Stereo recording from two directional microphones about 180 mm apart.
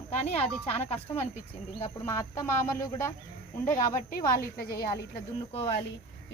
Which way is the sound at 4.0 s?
55° left (ahead or behind).